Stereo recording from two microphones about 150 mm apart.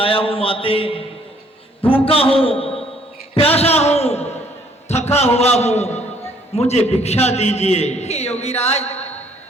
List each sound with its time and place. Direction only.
0.0 s a man's voice: 35° left (ahead or behind)